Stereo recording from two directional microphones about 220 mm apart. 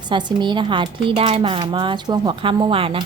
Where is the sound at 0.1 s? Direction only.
20° right (ahead or behind).